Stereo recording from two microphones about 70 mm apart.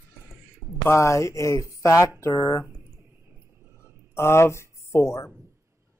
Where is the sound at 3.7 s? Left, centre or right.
Left.